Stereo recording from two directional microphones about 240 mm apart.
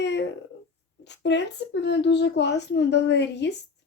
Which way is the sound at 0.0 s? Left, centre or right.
Left.